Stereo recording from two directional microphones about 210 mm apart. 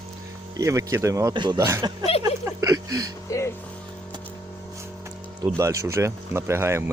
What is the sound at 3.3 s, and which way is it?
Speech, 15° left (ahead or behind).